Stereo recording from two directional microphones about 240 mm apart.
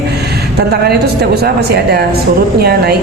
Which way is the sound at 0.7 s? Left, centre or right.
Right.